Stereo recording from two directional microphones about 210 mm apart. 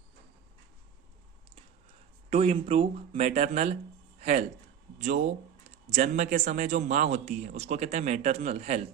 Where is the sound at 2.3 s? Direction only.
30° right (ahead or behind).